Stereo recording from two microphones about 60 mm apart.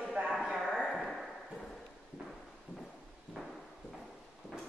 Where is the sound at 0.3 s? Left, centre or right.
Centre.